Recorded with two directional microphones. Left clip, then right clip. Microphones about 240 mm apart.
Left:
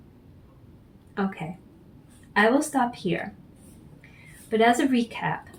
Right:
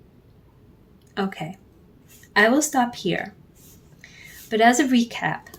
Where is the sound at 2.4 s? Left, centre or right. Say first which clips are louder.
Right 3 dB; right.